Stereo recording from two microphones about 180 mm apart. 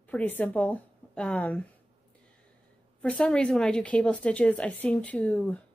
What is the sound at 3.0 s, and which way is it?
Speech, 5° left (ahead or behind).